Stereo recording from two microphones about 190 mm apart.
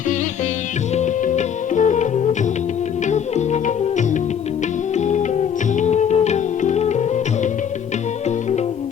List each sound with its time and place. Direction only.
0.9 s music: 40° left (ahead or behind)
3.1 s music: 40° left (ahead or behind)